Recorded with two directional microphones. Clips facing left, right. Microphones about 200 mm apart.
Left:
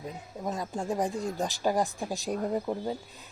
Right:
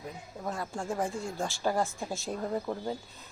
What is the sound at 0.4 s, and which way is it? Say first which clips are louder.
A woman's voice: left 3 dB; 20° left (ahead or behind).